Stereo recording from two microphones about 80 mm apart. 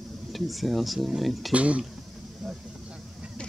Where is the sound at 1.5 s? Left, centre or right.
Centre.